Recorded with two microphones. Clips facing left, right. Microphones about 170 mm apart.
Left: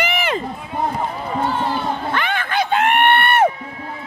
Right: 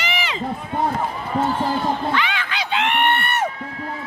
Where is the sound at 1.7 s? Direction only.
50° left (ahead or behind).